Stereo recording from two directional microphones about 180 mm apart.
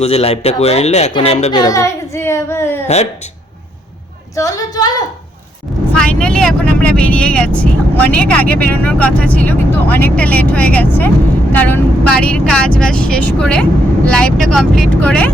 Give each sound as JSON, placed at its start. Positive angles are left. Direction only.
{"t": 0.0, "sound": "speech", "side_deg": 35}
{"t": 1.5, "sound": "child singing", "side_deg": 20}
{"t": 2.8, "sound": "speech", "side_deg": 40}
{"t": 4.4, "sound": "a woman's voice", "side_deg": 20}
{"t": 5.9, "sound": "speech", "side_deg": 5}